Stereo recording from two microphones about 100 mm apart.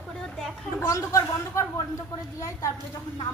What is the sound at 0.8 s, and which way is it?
A woman's voice, 30° left (ahead or behind).